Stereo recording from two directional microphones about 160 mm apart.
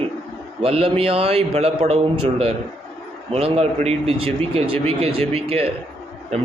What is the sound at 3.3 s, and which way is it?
Speech, 40° right (ahead or behind).